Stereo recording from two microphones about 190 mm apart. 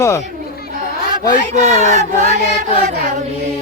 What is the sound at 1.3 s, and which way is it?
Speech, 15° left (ahead or behind).